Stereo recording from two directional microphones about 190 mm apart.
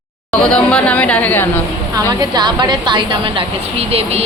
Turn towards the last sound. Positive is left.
turn(degrees=-30)  # may be behind; listen again after turning